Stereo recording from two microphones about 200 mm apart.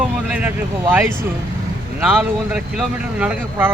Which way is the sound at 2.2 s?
5° right (ahead or behind).